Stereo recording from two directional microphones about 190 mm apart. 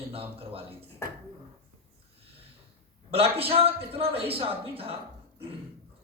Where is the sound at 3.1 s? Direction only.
30° right (ahead or behind).